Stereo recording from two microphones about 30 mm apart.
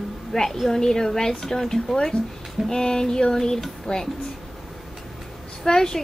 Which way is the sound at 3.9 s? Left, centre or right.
Left.